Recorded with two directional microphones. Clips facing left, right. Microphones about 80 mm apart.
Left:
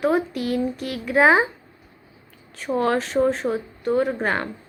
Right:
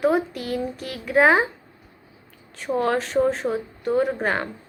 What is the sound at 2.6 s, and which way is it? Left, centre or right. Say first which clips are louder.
Speech: left 1 dB; centre.